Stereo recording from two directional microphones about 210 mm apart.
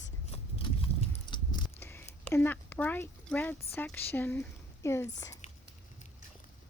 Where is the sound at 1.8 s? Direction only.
10° left (ahead or behind).